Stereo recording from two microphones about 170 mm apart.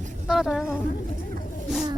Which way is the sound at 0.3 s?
Centre (ahead or behind).